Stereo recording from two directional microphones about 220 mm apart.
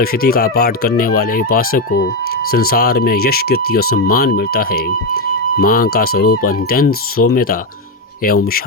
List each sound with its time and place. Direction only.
0.0 s speech: 45° left (ahead or behind)